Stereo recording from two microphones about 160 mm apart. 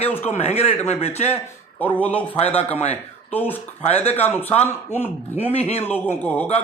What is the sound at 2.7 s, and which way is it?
Speech, 40° left (ahead or behind).